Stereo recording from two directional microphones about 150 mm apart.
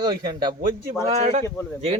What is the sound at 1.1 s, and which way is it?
Speech, 45° right (ahead or behind).